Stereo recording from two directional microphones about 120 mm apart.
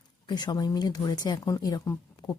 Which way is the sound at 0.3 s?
35° left (ahead or behind).